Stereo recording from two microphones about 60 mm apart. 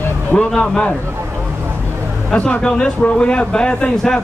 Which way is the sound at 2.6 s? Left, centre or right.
Centre.